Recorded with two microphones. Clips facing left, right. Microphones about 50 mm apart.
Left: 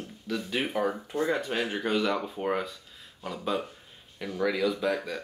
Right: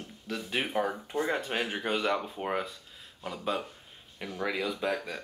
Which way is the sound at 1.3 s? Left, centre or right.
Right.